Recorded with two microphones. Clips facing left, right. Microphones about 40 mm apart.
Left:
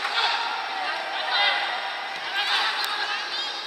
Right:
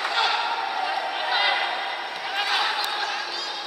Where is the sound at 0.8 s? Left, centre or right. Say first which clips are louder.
Right 2 dB; centre.